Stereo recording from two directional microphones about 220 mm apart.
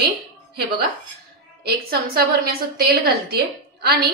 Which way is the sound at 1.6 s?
45° right (ahead or behind).